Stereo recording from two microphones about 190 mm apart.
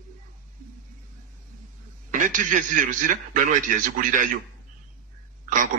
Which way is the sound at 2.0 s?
45° right (ahead or behind).